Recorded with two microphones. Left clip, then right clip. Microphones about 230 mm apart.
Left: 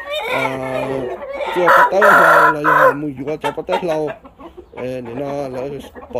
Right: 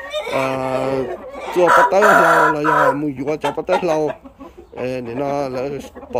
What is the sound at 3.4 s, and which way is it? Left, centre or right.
Speech, centre.